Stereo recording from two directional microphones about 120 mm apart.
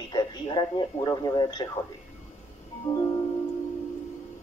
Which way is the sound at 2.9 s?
25° left (ahead or behind).